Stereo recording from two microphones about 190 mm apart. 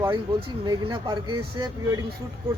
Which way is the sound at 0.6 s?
25° right (ahead or behind).